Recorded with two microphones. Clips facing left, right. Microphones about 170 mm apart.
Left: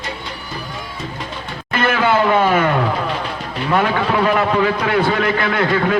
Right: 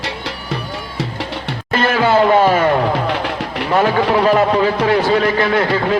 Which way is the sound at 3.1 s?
75° right (ahead or behind).